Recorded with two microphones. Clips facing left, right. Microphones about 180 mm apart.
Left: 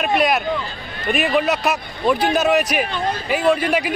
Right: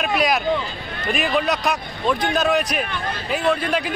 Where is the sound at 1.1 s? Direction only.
5° left (ahead or behind).